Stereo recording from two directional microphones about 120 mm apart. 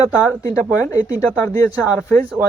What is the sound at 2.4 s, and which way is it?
Speech, 15° right (ahead or behind).